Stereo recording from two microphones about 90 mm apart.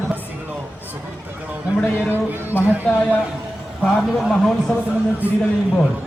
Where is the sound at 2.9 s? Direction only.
10° left (ahead or behind).